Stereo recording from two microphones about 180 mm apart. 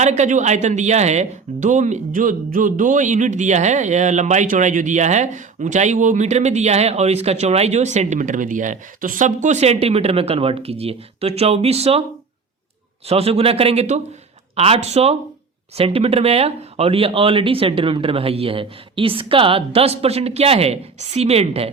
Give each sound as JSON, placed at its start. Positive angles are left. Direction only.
{"t": 0.0, "sound": "speech", "side_deg": -40}
{"t": 13.1, "sound": "speech", "side_deg": -35}